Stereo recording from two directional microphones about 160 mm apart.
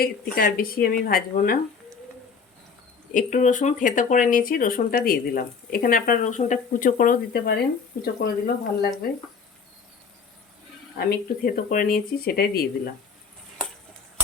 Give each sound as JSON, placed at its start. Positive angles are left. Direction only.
{"t": 0.0, "sound": "speech", "side_deg": 65}
{"t": 3.1, "sound": "speech", "side_deg": 55}
{"t": 10.9, "sound": "speech", "side_deg": 70}